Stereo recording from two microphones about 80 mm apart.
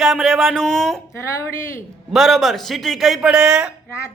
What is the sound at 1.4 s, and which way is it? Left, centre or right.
Speech, left.